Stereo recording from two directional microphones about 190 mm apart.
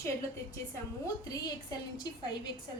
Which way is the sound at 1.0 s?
20° left (ahead or behind).